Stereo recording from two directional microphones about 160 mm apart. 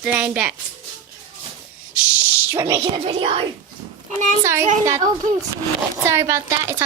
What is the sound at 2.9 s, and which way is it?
Speech, 35° right (ahead or behind).